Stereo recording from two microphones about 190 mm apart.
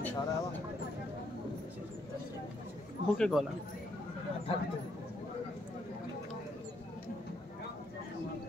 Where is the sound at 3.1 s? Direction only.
5° left (ahead or behind).